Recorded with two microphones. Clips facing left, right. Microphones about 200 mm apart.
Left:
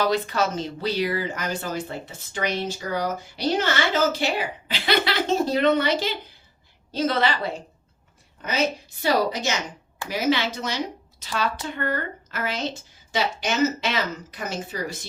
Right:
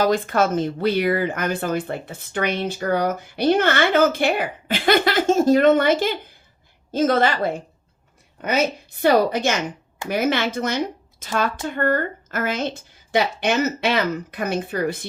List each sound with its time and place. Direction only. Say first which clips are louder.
0.0 s a woman's voice: right 4 dB; 50° right (ahead or behind)